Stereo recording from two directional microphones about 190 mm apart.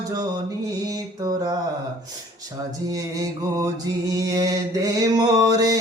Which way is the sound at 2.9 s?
20° right (ahead or behind).